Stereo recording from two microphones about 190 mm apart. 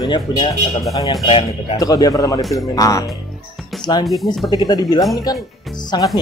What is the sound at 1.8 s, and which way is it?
Speech, 20° left (ahead or behind).